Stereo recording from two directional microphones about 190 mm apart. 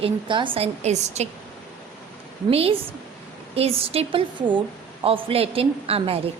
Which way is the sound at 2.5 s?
30° right (ahead or behind).